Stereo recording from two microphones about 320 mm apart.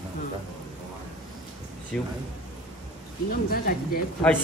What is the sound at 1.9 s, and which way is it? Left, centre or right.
Speech, centre.